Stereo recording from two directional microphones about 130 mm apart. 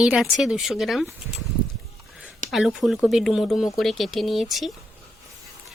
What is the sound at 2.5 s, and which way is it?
Speech, 5° right (ahead or behind).